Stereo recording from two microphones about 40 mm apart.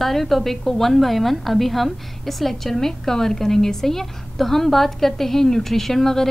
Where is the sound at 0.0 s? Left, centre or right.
Centre.